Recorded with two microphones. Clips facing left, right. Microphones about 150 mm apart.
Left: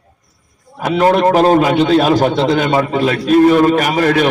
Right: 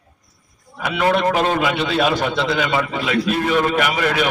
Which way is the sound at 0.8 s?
40° left (ahead or behind).